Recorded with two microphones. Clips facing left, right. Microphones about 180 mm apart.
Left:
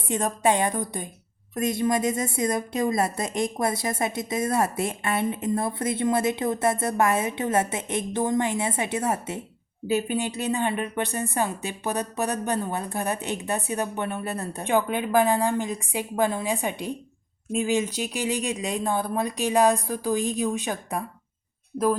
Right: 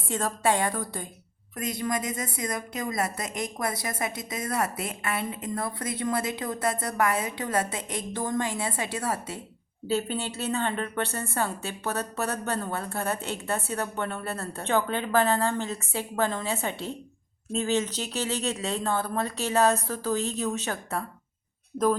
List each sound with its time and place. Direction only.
0.1 s a woman's voice: 20° left (ahead or behind)